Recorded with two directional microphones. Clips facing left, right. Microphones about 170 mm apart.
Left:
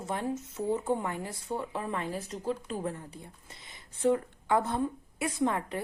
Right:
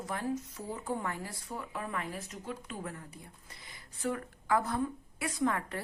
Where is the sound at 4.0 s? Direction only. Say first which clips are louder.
Left 8 dB; 25° left (ahead or behind).